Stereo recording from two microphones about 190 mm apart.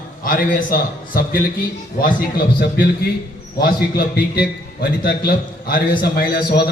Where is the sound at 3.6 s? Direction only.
55° left (ahead or behind).